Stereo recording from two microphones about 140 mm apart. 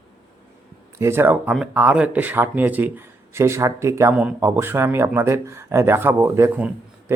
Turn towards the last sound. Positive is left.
turn(degrees=-15)  # may be behind; listen again after turning